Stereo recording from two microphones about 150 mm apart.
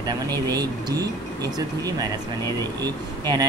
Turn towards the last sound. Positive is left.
turn(degrees=-25)  # may be behind; listen again after turning